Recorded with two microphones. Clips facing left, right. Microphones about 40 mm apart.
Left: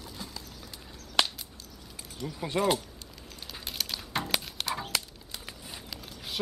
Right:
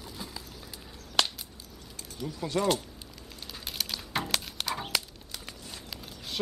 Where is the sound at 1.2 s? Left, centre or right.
Centre.